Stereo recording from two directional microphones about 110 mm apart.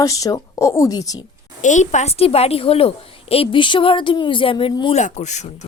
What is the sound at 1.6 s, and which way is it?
A woman's voice, 90° left.